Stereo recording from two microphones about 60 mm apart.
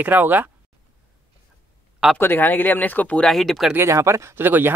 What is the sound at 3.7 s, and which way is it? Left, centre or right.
Speech, right.